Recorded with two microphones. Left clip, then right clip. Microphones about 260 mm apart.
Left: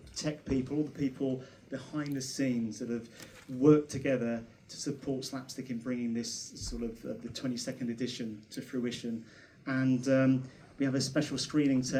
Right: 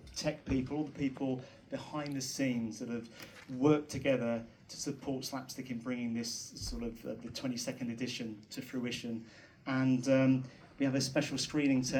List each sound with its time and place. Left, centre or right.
0.1 s speech: left